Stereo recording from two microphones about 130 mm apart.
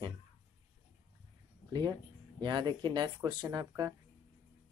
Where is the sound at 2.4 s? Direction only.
35° right (ahead or behind).